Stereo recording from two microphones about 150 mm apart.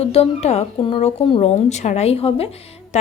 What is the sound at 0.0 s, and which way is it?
A woman's voice, 40° left (ahead or behind).